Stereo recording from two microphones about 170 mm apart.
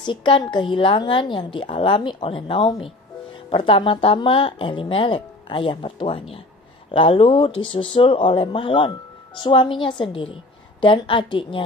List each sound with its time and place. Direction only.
0.0 s a woman's voice: 30° left (ahead or behind)